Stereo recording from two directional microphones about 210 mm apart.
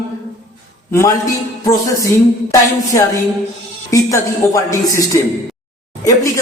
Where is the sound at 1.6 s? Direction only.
15° left (ahead or behind).